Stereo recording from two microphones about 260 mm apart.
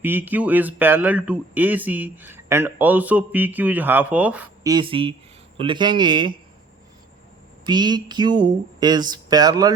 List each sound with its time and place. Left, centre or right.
0.0 s speech: centre
7.6 s speech: centre